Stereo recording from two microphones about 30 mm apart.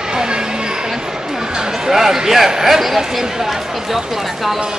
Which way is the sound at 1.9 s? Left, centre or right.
Centre.